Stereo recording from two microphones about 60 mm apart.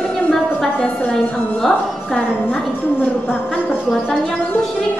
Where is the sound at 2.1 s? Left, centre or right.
Left.